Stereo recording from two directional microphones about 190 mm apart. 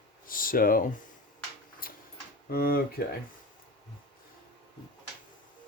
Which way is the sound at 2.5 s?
50° left (ahead or behind).